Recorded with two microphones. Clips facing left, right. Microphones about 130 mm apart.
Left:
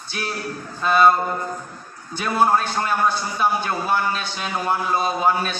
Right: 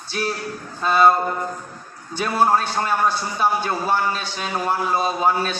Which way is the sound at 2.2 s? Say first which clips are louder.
Even; 30° right (ahead or behind).